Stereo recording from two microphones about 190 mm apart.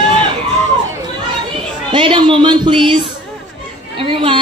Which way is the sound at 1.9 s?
25° right (ahead or behind).